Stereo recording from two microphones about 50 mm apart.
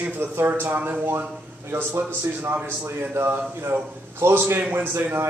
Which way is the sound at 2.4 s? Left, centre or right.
Right.